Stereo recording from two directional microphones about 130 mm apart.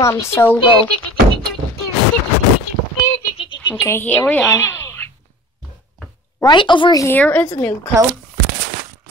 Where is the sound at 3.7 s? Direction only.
20° left (ahead or behind).